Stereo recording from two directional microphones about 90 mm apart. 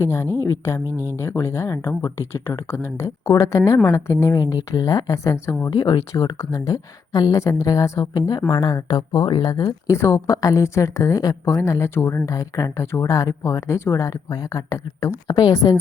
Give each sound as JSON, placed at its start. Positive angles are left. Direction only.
{"t": 0.0, "sound": "speech", "side_deg": 30}
{"t": 0.9, "sound": "speech", "side_deg": -25}
{"t": 1.1, "sound": "a woman's voice", "side_deg": 30}
{"t": 5.7, "sound": "speech", "side_deg": 55}
{"t": 6.4, "sound": "a woman's voice", "side_deg": 40}
{"t": 9.6, "sound": "a woman's voice", "side_deg": 35}
{"t": 12.2, "sound": "a woman's voice", "side_deg": 40}